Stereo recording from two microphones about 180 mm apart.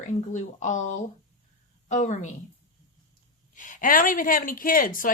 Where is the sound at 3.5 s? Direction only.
45° left (ahead or behind).